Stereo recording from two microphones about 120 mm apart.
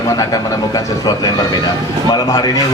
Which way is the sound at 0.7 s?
30° left (ahead or behind).